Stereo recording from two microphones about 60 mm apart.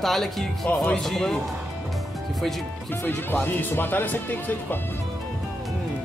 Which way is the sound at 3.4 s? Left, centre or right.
Left.